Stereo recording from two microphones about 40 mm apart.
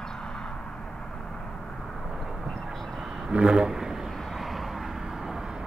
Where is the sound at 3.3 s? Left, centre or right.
Right.